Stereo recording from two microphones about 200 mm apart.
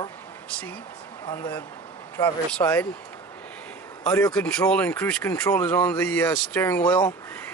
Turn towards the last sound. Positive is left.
turn(degrees=5)  # may be behind; listen again after turning